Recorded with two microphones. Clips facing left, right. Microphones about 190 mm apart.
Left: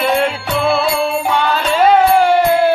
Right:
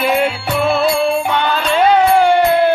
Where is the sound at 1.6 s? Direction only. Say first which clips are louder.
Left 1 dB; 5° left (ahead or behind).